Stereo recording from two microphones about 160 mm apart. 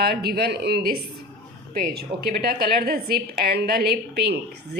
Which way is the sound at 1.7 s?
70° right (ahead or behind).